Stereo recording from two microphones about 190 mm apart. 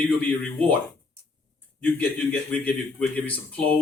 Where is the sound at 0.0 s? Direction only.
10° left (ahead or behind).